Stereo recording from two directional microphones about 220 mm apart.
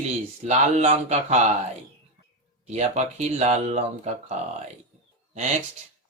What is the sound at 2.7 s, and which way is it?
Speech, 30° right (ahead or behind).